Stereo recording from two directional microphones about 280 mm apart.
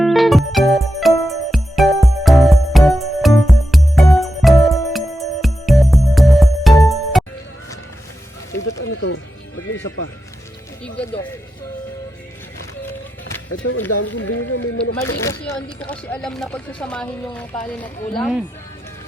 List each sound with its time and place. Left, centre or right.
0.0 s music: centre
8.5 s music: left
13.5 s a sound: left
15.2 s speech: centre